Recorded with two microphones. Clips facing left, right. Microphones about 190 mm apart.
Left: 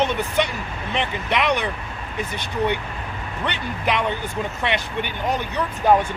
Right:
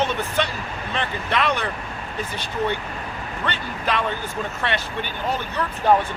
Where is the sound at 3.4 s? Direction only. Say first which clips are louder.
Left 2 dB; 15° left (ahead or behind).